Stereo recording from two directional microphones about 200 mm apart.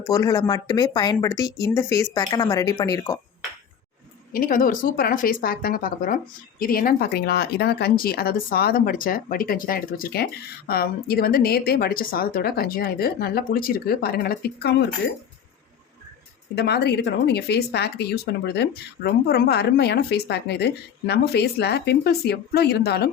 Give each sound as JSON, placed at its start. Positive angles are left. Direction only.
{"t": 0.1, "sound": "speech", "side_deg": 20}
{"t": 1.5, "sound": "speech", "side_deg": 0}
{"t": 1.7, "sound": "speech", "side_deg": 15}
{"t": 4.3, "sound": "a woman's voice", "side_deg": 45}
{"t": 16.6, "sound": "speech", "side_deg": 55}